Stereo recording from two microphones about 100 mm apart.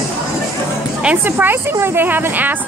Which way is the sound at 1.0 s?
15° right (ahead or behind).